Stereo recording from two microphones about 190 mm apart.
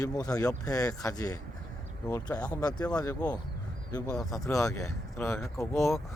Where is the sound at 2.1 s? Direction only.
5° left (ahead or behind).